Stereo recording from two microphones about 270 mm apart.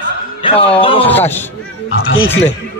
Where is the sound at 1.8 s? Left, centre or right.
Left.